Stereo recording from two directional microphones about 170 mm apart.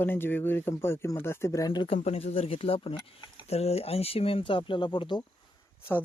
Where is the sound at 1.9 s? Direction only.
40° left (ahead or behind).